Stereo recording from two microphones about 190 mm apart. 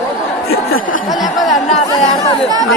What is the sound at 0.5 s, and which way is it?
Speech, 90° left.